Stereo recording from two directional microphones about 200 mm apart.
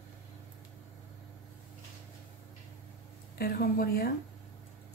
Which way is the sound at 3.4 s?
45° left (ahead or behind).